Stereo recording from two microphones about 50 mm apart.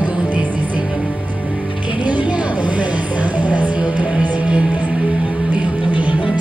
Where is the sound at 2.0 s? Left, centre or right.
Right.